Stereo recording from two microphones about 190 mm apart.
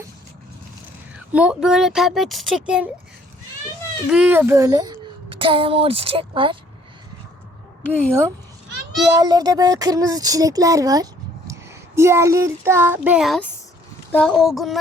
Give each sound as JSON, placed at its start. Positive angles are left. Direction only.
{"t": 1.3, "sound": "speech", "side_deg": -5}
{"t": 4.1, "sound": "a child's voice", "side_deg": -5}
{"t": 7.9, "sound": "a woman's voice", "side_deg": 5}
{"t": 9.0, "sound": "speech", "side_deg": -20}